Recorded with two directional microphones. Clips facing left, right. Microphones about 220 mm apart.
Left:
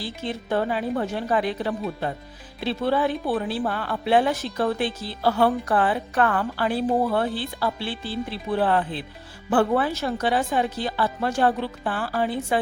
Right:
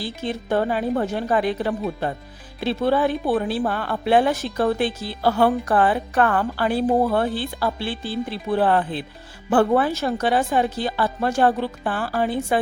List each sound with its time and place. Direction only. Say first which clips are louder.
0.0 s a woman's voice: right 3 dB; 45° right (ahead or behind)